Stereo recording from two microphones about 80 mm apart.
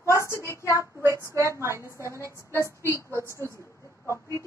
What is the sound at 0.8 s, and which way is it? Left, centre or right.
Child singing, right.